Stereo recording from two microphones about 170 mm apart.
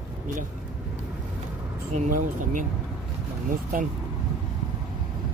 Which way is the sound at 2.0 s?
55° right (ahead or behind).